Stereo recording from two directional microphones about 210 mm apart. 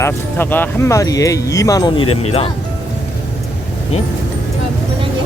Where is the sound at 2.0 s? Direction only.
90° left.